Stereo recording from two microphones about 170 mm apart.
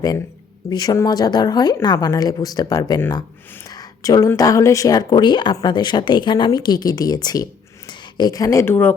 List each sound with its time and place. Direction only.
0.7 s speech: 25° left (ahead or behind)